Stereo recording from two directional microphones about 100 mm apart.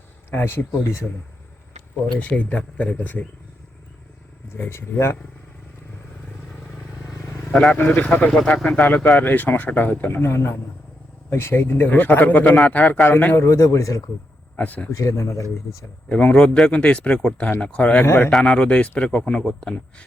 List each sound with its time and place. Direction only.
0.3 s a man's voice: 20° left (ahead or behind)
2.1 s speech: 15° left (ahead or behind)
4.4 s a man's voice: 25° left (ahead or behind)
6.7 s vehicle: 30° left (ahead or behind)
7.5 s a man's voice: 5° left (ahead or behind); by 14.0 s 30° left (ahead or behind)
14.5 s speech: 15° left (ahead or behind)
14.9 s speech: 30° left (ahead or behind)
16.0 s speech: 10° left (ahead or behind)
18.0 s a man's voice: 25° left (ahead or behind)
18.3 s speech: 5° left (ahead or behind)